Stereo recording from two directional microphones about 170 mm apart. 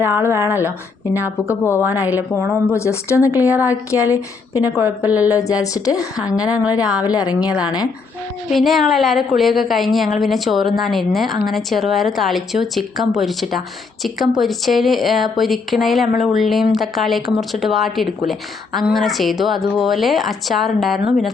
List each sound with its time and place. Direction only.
0.0 s a woman's voice: 15° right (ahead or behind)
0.4 s a woman's voice: 15° left (ahead or behind)
4.8 s a woman's voice: 10° right (ahead or behind)
5.3 s a woman's voice: 20° left (ahead or behind)
6.4 s a woman's voice: 10° right (ahead or behind)
7.1 s a woman's voice: 20° left (ahead or behind)
8.4 s a woman's voice: centre (ahead or behind)